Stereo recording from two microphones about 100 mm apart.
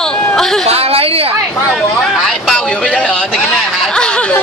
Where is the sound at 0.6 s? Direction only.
90° right.